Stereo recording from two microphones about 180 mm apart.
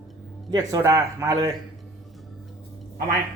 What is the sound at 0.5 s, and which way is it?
Speech, 20° right (ahead or behind).